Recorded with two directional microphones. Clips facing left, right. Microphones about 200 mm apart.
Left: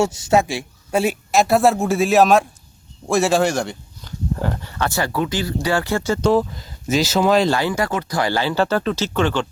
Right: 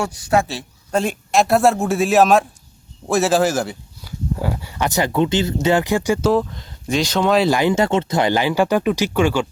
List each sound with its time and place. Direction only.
0.0 s speech: 25° left (ahead or behind)
0.4 s a man's voice: 10° left (ahead or behind); by 6.3 s 15° right (ahead or behind)
6.3 s a man's voice: 5° left (ahead or behind)
7.5 s speech: 20° right (ahead or behind)